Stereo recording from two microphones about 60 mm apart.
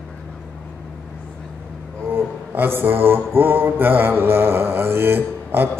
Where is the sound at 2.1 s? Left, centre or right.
Right.